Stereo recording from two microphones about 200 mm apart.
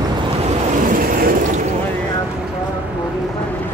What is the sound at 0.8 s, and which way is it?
Vehicle, 45° right (ahead or behind).